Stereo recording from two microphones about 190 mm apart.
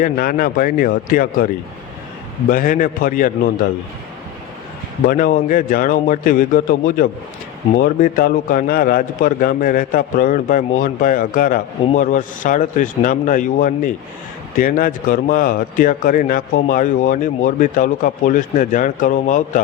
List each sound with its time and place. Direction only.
0.0 s a man's voice: 50° left (ahead or behind)
2.5 s a man's voice: 45° left (ahead or behind)
5.0 s a man's voice: 50° left (ahead or behind)